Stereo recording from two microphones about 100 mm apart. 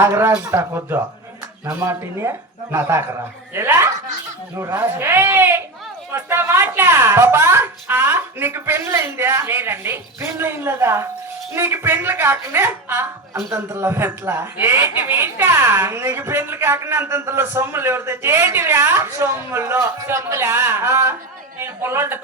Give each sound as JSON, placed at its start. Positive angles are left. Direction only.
{"t": 0.0, "sound": "a woman's voice", "side_deg": -25}